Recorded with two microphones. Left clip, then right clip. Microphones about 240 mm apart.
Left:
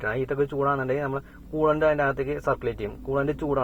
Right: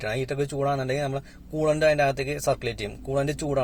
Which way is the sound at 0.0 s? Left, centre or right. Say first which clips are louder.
Left 2 dB; right.